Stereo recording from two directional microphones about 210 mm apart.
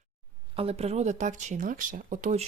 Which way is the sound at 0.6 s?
30° right (ahead or behind).